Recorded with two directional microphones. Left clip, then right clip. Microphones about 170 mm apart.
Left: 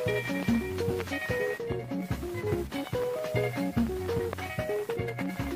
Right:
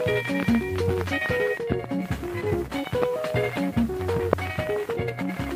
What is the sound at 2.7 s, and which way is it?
Music, 35° right (ahead or behind).